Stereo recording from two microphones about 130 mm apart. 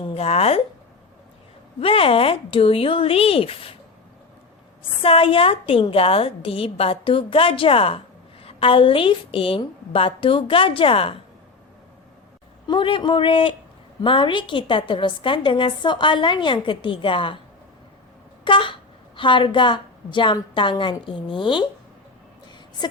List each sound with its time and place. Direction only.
0.0 s a woman's voice: 50° left (ahead or behind)
1.8 s a woman's voice: 45° left (ahead or behind)
5.0 s a woman's voice: 45° left (ahead or behind)
12.6 s a woman's voice: 40° left (ahead or behind)
18.4 s a woman's voice: 40° left (ahead or behind)
22.8 s a woman's voice: 35° left (ahead or behind)